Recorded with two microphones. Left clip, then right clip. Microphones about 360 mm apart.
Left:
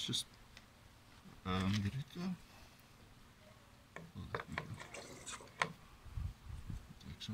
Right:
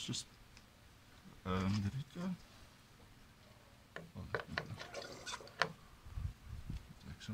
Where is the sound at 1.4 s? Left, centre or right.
Centre.